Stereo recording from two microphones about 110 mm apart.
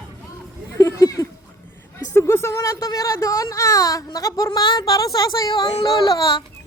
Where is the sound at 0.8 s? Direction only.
30° left (ahead or behind).